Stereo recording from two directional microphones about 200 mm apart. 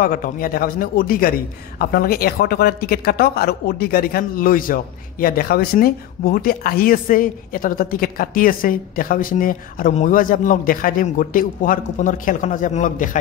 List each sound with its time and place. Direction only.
0.0 s speech: 45° left (ahead or behind)